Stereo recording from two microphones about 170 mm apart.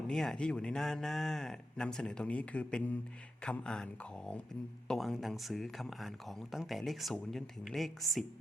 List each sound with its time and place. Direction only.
0.1 s speech: 5° left (ahead or behind)
4.9 s speech: centre (ahead or behind)